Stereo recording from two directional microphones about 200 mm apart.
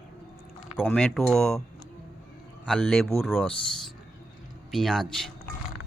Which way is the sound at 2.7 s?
5° left (ahead or behind).